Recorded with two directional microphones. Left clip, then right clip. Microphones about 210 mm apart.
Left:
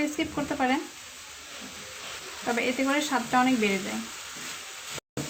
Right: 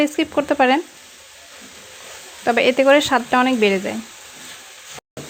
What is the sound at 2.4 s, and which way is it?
Speech, 50° right (ahead or behind).